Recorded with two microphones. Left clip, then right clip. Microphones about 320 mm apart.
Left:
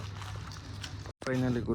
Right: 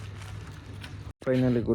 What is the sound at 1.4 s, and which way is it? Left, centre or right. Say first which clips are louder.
Speech: right 6 dB; right.